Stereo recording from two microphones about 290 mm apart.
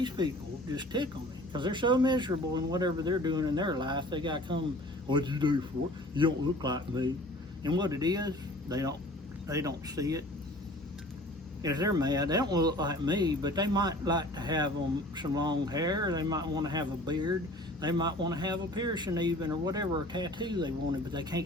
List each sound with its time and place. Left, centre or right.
0.2 s speech: centre
11.6 s speech: centre